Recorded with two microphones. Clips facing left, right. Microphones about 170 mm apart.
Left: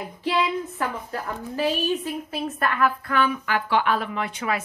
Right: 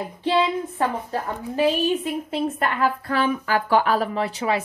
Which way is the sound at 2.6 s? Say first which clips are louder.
Right 1 dB; 25° right (ahead or behind).